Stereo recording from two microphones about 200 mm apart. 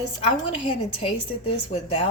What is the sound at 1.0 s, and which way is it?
A woman's voice, 30° left (ahead or behind).